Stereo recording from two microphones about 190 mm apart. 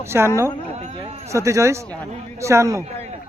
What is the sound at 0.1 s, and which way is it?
Speech, 15° right (ahead or behind).